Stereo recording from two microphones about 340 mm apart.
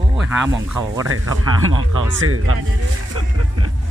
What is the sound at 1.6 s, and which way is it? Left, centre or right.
Speech, right.